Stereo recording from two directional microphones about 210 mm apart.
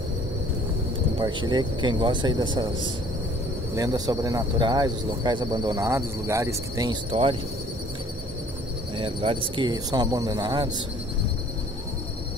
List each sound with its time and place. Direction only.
1.1 s speech: 20° right (ahead or behind)
3.7 s speech: 15° right (ahead or behind)
8.9 s speech: 25° right (ahead or behind)